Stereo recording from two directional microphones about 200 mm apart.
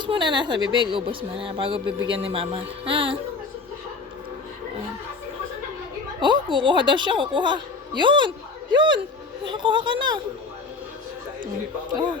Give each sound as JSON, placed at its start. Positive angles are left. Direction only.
{"t": 0.0, "sound": "speech", "side_deg": -25}
{"t": 6.1, "sound": "speech", "side_deg": -25}